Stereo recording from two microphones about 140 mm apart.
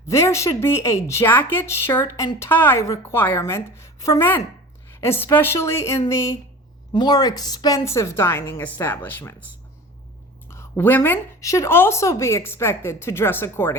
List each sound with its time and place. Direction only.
0.1 s a woman's voice: 20° left (ahead or behind)
10.5 s a woman's voice: 15° left (ahead or behind)